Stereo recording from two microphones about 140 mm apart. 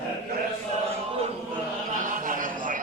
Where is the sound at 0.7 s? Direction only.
45° right (ahead or behind).